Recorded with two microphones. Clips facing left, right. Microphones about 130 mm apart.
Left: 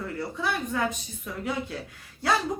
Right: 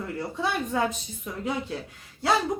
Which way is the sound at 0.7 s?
25° right (ahead or behind).